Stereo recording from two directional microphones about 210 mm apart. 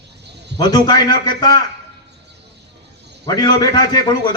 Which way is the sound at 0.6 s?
20° left (ahead or behind).